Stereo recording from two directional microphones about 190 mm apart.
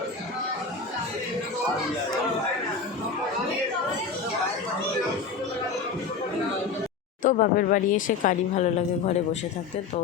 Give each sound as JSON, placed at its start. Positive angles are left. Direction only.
{"t": 7.2, "sound": "speech", "side_deg": 45}